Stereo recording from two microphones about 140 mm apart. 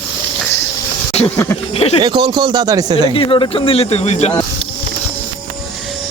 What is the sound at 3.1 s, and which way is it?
Speech, 40° left (ahead or behind).